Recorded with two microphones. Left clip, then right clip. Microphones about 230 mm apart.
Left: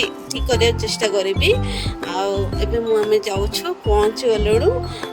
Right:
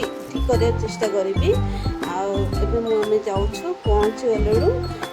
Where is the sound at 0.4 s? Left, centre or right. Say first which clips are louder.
Left 3 dB; left.